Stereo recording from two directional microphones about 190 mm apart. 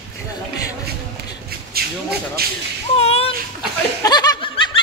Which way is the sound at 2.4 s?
55° right (ahead or behind).